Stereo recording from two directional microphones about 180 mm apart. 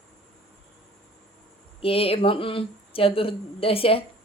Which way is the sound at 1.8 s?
35° left (ahead or behind).